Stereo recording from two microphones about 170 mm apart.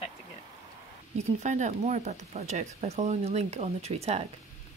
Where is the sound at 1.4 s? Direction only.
45° right (ahead or behind).